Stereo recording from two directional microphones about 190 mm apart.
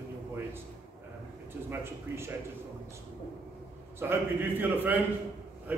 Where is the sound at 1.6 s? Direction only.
15° right (ahead or behind).